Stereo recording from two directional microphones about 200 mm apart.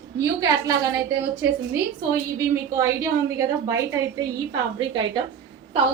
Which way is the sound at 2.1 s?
15° right (ahead or behind).